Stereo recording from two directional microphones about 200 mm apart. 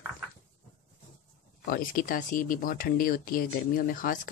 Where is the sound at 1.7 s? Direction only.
45° left (ahead or behind).